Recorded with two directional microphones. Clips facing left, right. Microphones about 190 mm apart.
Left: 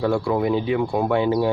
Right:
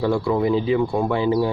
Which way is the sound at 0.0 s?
Centre (ahead or behind).